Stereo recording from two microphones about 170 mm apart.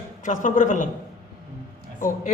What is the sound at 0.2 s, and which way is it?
Speech, 50° left (ahead or behind).